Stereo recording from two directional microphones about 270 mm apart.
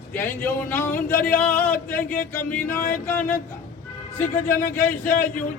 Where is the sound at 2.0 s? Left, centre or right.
Left.